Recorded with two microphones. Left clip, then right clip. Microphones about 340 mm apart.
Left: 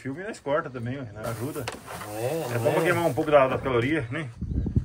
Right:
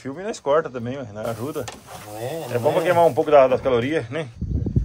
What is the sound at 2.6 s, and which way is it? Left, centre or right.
Speech, centre.